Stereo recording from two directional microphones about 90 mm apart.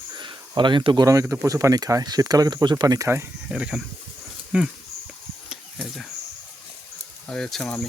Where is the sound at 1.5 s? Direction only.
40° right (ahead or behind).